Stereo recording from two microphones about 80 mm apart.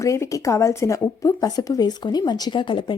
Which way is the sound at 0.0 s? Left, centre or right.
Left.